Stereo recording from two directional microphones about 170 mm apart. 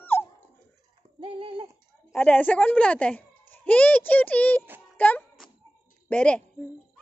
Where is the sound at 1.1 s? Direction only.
30° right (ahead or behind).